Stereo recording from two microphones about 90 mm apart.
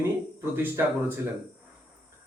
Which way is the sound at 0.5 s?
25° right (ahead or behind).